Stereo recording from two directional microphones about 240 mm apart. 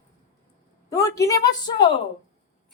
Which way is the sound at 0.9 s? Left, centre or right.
Centre.